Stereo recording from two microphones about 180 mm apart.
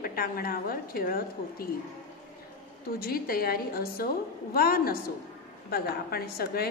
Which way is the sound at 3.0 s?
55° left (ahead or behind).